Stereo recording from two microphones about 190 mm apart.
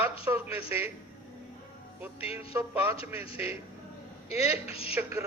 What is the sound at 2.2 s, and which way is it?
Speech, 30° left (ahead or behind).